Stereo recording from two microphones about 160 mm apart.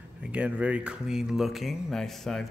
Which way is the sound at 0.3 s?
10° right (ahead or behind).